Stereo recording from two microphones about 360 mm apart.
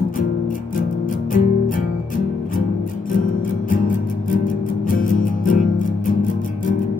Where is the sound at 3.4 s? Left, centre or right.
Left.